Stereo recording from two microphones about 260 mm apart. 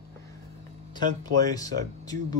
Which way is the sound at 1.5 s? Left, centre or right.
Centre.